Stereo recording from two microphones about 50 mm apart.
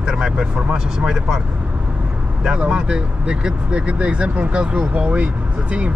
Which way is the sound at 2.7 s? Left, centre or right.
Centre.